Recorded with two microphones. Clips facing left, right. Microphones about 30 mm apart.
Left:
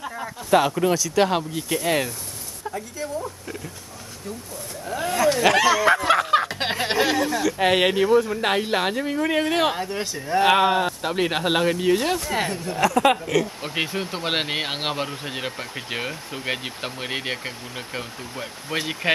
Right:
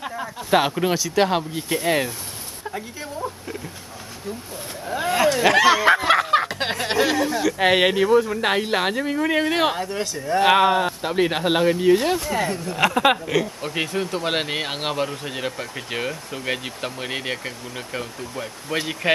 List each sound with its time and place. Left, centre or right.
0.5 s speech: centre
1.2 s speech: centre
4.8 s speech: centre
5.8 s speech: right
6.0 s a sound: centre
6.6 s speech: centre
12.7 s speech: right
13.0 s speech: centre
13.6 s speech: centre